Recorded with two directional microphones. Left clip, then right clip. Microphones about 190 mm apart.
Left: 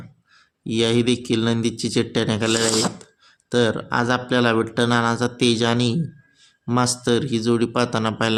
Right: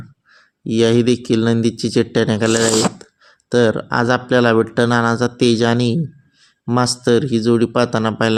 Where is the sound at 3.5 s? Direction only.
25° right (ahead or behind).